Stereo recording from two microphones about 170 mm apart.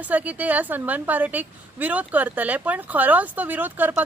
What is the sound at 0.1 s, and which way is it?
A woman's voice, 10° right (ahead or behind).